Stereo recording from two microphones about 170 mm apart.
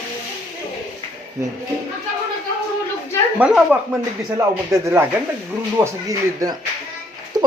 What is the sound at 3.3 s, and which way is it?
Speech, 5° right (ahead or behind).